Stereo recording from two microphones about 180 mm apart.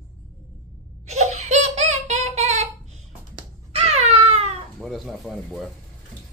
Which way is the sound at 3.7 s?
35° right (ahead or behind).